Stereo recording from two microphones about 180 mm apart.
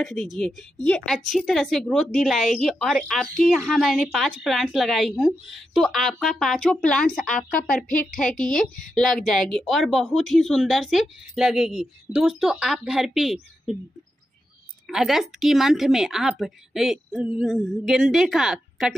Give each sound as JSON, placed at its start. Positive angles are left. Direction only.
{"t": 0.2, "sound": "speech", "side_deg": 0}
{"t": 7.3, "sound": "speech", "side_deg": 50}
{"t": 8.4, "sound": "speech", "side_deg": 5}
{"t": 14.9, "sound": "speech", "side_deg": 0}